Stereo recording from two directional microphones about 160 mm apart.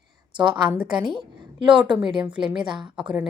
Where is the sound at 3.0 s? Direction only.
5° right (ahead or behind).